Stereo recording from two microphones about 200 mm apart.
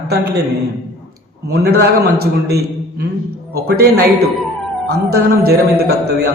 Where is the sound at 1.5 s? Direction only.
55° right (ahead or behind).